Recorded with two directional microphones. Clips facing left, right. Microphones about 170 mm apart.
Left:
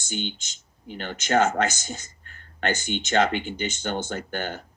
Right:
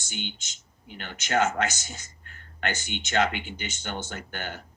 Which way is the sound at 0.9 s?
40° left (ahead or behind).